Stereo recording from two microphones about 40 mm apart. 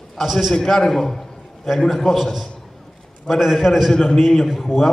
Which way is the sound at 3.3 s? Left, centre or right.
Centre.